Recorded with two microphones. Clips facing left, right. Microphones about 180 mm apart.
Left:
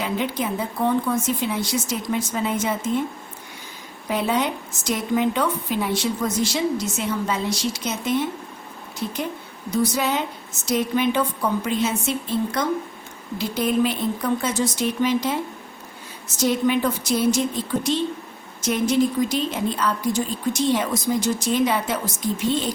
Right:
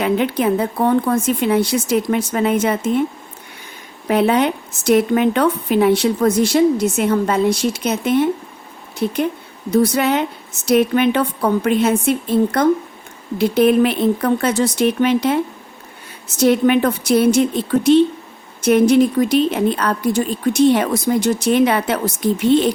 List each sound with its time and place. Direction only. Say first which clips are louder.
0.0 s speech: right 8 dB; 65° right (ahead or behind)
4.0 s a woman's voice: right 7 dB; 65° right (ahead or behind)
16.4 s speech: right 7 dB; 65° right (ahead or behind)